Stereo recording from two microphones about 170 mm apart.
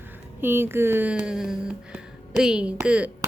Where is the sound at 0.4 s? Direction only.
15° right (ahead or behind).